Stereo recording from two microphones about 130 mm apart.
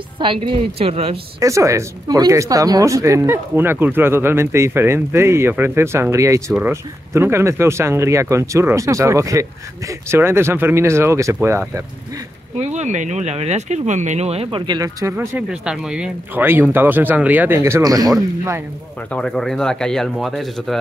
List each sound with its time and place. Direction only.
0.2 s speech: 40° right (ahead or behind)
1.4 s speech: 25° right (ahead or behind)
12.6 s speech: 65° right (ahead or behind)
14.7 s speech: 30° right (ahead or behind)
15.1 s speech: 10° right (ahead or behind); by 18.1 s 25° right (ahead or behind)
19.1 s speech: 5° left (ahead or behind)